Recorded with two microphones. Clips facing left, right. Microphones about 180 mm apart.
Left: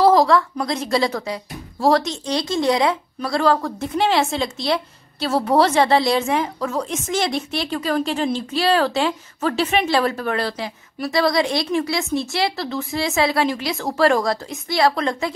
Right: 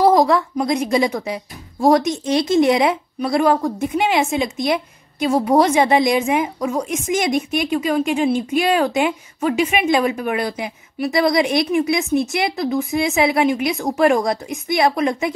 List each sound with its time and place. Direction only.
0.0 s speech: 20° right (ahead or behind)